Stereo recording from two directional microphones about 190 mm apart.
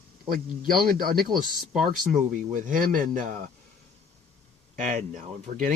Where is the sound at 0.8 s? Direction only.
50° right (ahead or behind).